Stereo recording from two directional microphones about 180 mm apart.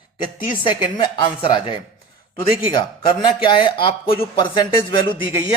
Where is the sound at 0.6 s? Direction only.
25° left (ahead or behind).